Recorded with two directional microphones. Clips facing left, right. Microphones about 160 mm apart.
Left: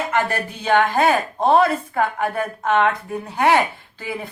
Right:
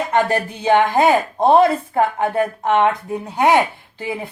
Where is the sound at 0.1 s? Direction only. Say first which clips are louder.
Right 4 dB; 20° right (ahead or behind).